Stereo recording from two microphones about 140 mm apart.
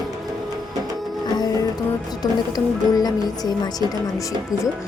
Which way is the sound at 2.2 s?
30° left (ahead or behind).